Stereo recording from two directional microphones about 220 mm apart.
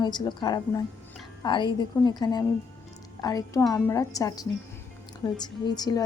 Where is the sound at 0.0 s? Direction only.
20° left (ahead or behind).